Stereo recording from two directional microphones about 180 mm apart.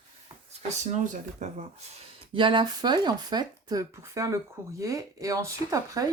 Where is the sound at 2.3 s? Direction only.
25° right (ahead or behind).